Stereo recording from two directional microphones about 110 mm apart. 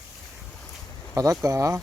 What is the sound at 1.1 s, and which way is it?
Speech, 30° right (ahead or behind).